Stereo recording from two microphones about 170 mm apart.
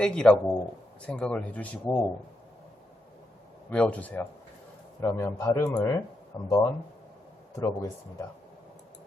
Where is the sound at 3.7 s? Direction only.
10° left (ahead or behind).